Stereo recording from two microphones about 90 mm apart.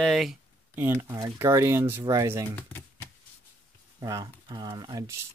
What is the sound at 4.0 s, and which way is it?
Speech, 40° right (ahead or behind).